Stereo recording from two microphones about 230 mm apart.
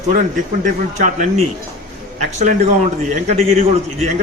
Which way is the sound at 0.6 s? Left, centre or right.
Right.